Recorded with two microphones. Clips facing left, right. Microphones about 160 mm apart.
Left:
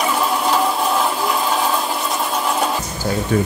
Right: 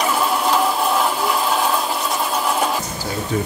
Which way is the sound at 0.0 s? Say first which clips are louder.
Even; centre (ahead or behind).